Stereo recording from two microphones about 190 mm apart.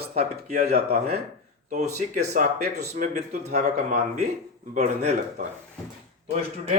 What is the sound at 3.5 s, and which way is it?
A man's voice, 35° right (ahead or behind).